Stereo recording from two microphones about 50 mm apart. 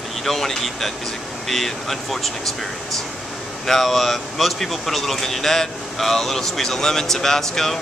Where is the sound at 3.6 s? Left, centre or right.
Centre.